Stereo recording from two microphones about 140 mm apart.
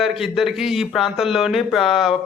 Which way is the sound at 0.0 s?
Centre (ahead or behind).